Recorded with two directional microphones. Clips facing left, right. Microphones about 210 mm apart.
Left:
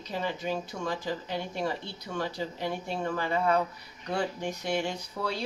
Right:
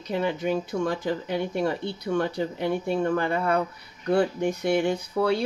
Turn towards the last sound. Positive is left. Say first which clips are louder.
# right 10 dB
turn(degrees=-55)  # may be behind; listen again after turning